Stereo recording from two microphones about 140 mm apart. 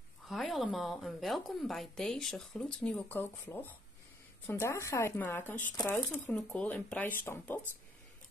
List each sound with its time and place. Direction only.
0.3 s a woman's voice: centre (ahead or behind); by 7.6 s 15° left (ahead or behind)